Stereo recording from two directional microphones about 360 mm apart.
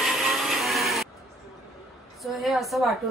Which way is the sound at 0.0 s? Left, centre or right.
Centre.